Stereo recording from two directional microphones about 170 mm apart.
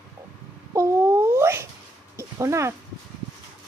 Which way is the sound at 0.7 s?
15° right (ahead or behind).